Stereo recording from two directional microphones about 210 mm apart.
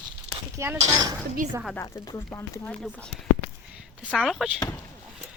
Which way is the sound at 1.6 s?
10° left (ahead or behind).